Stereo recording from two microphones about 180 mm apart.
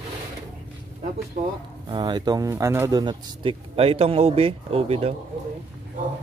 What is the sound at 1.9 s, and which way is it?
Speech, 25° right (ahead or behind).